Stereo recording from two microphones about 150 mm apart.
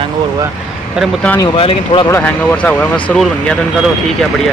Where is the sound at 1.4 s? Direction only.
35° left (ahead or behind).